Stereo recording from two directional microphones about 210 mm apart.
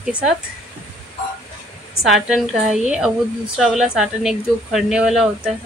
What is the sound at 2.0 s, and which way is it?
A woman's voice, centre (ahead or behind).